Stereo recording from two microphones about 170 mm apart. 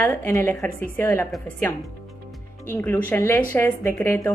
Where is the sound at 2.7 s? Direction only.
10° left (ahead or behind).